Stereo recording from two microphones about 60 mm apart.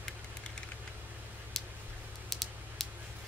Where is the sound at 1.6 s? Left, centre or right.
Centre.